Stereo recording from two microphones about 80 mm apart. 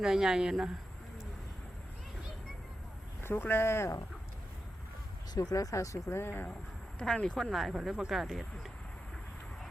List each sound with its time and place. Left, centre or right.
0.0 s speech: centre
3.2 s speech: left
5.4 s speech: left
7.0 s speech: centre
7.5 s speech: centre